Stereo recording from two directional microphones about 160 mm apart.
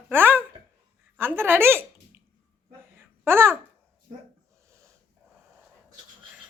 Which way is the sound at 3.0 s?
15° right (ahead or behind).